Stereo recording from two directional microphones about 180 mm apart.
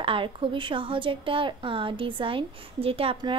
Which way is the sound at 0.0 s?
30° right (ahead or behind).